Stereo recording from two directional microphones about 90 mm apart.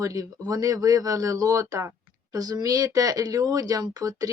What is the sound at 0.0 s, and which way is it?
Speech, 40° right (ahead or behind).